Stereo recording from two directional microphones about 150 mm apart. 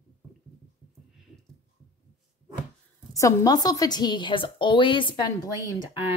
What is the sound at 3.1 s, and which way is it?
A woman's voice, 25° left (ahead or behind).